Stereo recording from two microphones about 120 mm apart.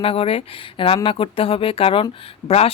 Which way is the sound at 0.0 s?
50° left (ahead or behind).